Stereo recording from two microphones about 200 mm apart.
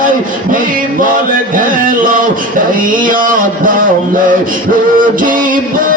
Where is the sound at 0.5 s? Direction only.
45° right (ahead or behind).